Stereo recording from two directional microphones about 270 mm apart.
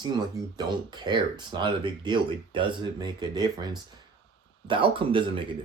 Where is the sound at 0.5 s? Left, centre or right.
Centre.